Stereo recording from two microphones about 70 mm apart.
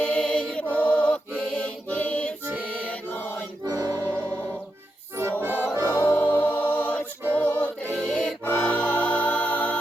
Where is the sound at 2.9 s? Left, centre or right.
Left.